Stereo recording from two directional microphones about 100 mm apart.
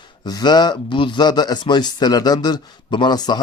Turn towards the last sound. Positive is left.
turn(degrees=45)  # may be behind; listen again after turning